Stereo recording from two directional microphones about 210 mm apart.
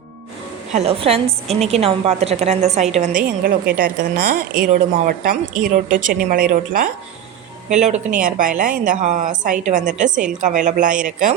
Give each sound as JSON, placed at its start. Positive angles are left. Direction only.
{"t": 0.7, "sound": "a woman's voice", "side_deg": -30}